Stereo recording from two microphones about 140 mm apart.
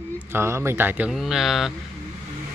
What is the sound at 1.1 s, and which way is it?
Speech, centre (ahead or behind).